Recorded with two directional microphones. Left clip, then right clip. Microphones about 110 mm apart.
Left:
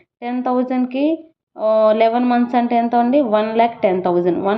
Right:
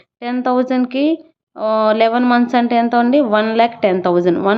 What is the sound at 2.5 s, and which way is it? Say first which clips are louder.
A woman's voice: right 2 dB; 20° right (ahead or behind).